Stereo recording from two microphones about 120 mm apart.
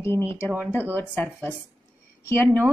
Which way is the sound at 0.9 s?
15° left (ahead or behind).